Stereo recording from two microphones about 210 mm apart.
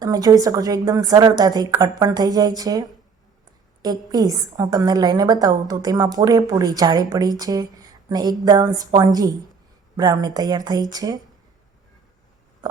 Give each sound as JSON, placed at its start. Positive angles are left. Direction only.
{"t": 0.0, "sound": "a woman's voice", "side_deg": -15}